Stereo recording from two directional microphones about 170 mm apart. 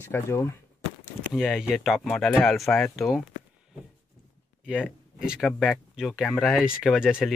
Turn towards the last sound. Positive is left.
turn(degrees=-5)  # may be behind; listen again after turning